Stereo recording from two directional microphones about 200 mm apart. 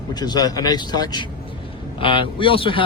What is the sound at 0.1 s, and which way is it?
Speech, 20° left (ahead or behind).